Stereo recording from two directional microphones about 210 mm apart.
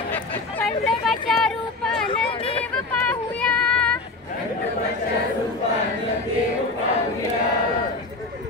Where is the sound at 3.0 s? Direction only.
5° left (ahead or behind).